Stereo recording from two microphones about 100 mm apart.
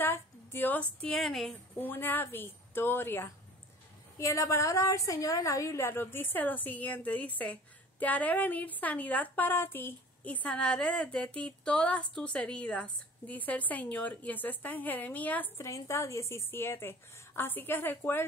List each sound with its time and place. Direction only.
0.0 s a sound: 20° left (ahead or behind)
1.0 s a woman's voice: centre (ahead or behind)
1.8 s a woman's voice: 20° left (ahead or behind)
15.6 s a woman's voice: 30° left (ahead or behind)